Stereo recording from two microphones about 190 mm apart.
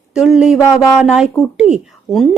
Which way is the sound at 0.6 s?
15° left (ahead or behind).